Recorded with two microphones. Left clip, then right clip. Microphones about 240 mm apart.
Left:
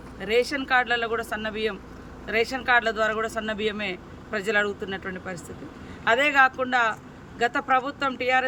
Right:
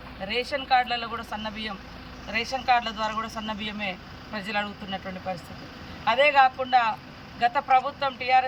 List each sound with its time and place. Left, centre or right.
0.3 s speech: centre